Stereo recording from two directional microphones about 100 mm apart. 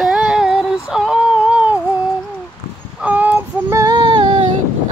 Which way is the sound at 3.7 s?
30° right (ahead or behind).